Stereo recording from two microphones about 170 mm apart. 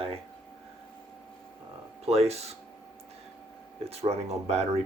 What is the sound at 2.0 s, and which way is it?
Speech, 35° right (ahead or behind).